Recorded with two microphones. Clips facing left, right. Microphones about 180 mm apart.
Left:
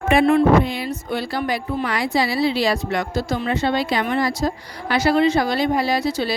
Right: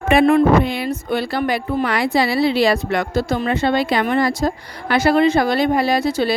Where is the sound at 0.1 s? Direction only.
60° right (ahead or behind).